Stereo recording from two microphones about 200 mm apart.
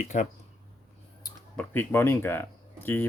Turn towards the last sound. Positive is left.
turn(degrees=10)  # may be behind; listen again after turning